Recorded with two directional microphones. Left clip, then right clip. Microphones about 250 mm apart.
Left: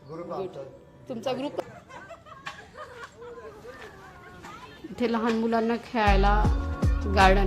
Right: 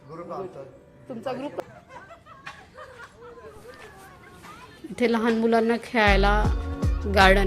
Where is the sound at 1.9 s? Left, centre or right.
Left.